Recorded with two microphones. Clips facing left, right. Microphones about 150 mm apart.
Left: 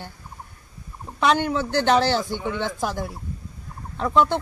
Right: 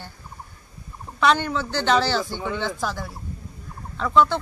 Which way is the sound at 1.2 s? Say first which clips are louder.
Even; 15° left (ahead or behind).